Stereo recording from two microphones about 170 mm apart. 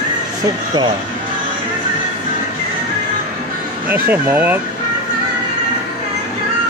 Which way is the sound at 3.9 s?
10° right (ahead or behind).